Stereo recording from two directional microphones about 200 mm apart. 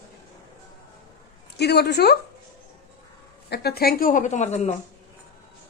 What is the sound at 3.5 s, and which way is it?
A woman's voice, 50° left (ahead or behind).